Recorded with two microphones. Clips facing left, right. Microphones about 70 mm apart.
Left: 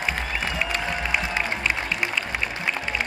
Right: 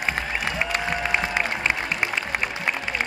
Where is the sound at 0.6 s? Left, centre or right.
Right.